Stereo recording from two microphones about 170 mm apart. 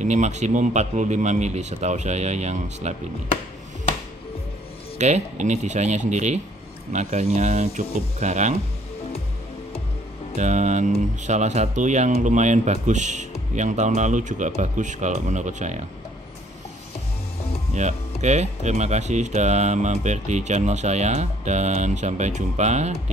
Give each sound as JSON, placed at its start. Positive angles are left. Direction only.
{"t": 0.0, "sound": "speech", "side_deg": -45}
{"t": 4.9, "sound": "speech", "side_deg": -45}
{"t": 10.3, "sound": "speech", "side_deg": -45}
{"t": 17.7, "sound": "speech", "side_deg": -45}